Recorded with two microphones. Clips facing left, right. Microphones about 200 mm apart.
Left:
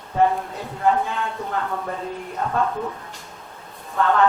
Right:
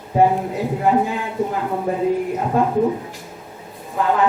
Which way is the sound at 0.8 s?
15° right (ahead or behind).